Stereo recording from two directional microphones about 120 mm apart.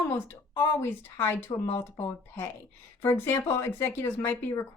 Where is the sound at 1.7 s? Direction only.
55° left (ahead or behind).